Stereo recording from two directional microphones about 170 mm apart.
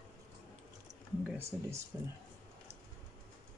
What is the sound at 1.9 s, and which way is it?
Speech, 20° right (ahead or behind).